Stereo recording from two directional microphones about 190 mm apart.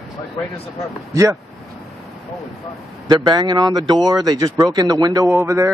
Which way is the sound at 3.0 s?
20° right (ahead or behind).